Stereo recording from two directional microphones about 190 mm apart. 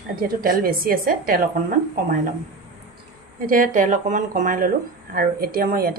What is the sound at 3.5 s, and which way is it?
A woman's voice, 45° right (ahead or behind).